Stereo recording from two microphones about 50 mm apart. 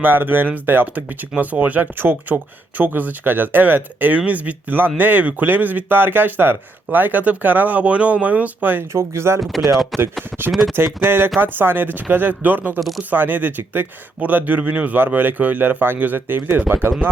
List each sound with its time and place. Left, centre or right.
0.0 s speech: right
8.9 s speech: right
9.4 s speech: centre
10.8 s speech: right